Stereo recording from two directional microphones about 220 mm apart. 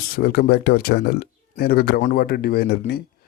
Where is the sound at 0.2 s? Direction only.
45° left (ahead or behind).